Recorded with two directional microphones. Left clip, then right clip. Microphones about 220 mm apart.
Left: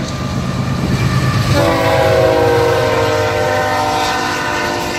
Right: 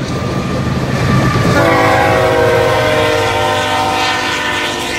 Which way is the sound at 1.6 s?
35° left (ahead or behind).